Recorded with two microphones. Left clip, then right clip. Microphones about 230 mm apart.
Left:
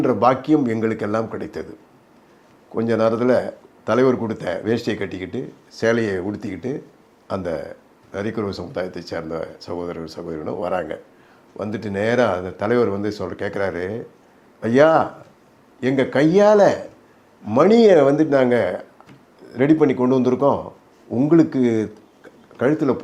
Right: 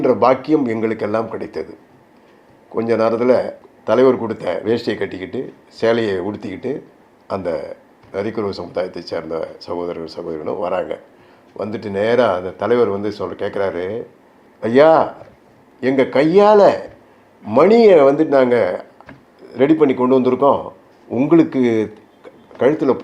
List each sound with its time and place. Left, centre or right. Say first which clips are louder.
0.0 s a man's voice: right 3 dB; left
2.7 s a man's voice: right 3 dB; left
14.6 s a man's voice: right 4 dB; left
21.1 s speech: right 2 dB; left
22.5 s a man's voice: right 4 dB; left